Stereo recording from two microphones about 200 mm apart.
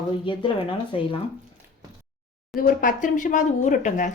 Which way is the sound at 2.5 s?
45° left (ahead or behind).